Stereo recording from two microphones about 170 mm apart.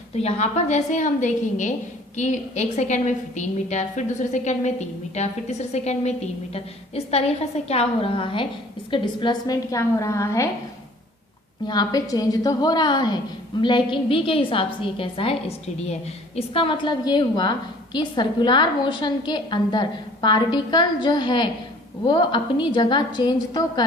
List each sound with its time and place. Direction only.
0.2 s a woman's voice: 40° left (ahead or behind); by 10.5 s 15° left (ahead or behind)
11.6 s a woman's voice: 25° left (ahead or behind)